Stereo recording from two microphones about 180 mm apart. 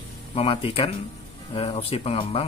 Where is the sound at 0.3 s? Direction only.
30° left (ahead or behind).